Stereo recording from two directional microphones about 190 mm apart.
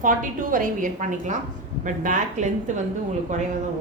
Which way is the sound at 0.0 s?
45° right (ahead or behind).